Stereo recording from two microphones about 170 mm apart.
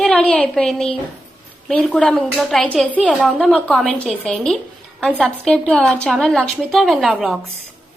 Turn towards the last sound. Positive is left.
turn(degrees=-5)  # may be behind; listen again after turning